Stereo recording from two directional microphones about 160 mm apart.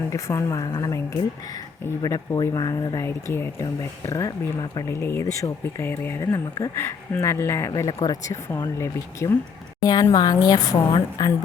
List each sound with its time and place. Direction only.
0.1 s speech: 20° left (ahead or behind)
4.9 s speech: 15° left (ahead or behind)